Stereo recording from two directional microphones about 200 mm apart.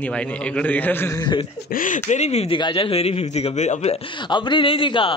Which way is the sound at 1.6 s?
45° left (ahead or behind).